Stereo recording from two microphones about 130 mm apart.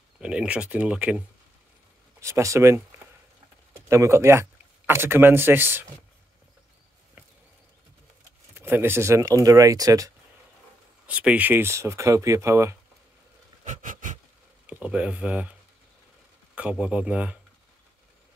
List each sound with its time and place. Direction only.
0.2 s speech: 10° right (ahead or behind)
2.1 s speech: 25° right (ahead or behind)
3.9 s speech: 20° right (ahead or behind)
8.5 s speech: 15° right (ahead or behind)
11.1 s speech: 10° right (ahead or behind)
13.7 s a sound: 75° right (ahead or behind)
14.7 s speech: 5° right (ahead or behind)
16.5 s speech: 10° right (ahead or behind)